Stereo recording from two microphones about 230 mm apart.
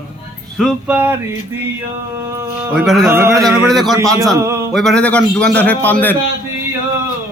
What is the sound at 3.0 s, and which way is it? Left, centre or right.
Speech, centre.